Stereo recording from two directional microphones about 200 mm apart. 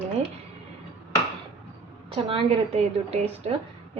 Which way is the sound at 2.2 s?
30° right (ahead or behind).